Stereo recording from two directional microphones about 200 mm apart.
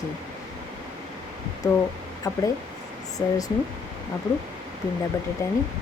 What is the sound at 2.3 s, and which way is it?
Speech, 15° left (ahead or behind).